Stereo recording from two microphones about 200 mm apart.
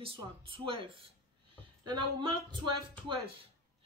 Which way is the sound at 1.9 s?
25° right (ahead or behind).